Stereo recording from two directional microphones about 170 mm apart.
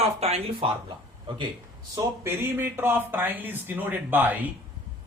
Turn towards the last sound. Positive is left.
turn(degrees=-10)  # may be behind; listen again after turning